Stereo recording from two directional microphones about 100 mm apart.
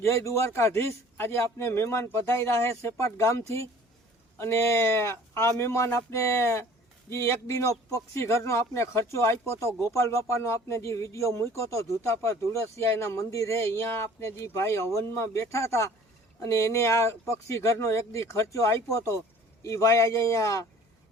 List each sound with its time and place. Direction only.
0.0 s speech: 30° left (ahead or behind)